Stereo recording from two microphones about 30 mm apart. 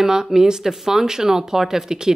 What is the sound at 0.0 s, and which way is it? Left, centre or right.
Speech, centre.